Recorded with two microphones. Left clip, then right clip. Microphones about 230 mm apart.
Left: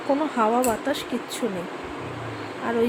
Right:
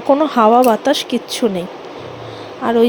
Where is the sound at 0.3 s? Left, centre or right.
Right.